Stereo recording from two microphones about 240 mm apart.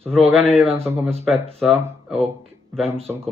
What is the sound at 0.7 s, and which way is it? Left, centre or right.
Speech, centre.